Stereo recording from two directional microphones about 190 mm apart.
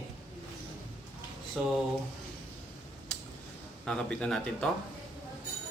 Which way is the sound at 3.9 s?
5° left (ahead or behind).